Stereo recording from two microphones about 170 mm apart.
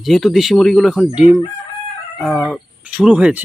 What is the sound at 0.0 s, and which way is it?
Speech, centre (ahead or behind).